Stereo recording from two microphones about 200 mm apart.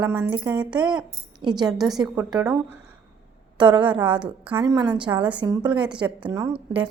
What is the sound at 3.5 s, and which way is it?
Speech, 25° right (ahead or behind).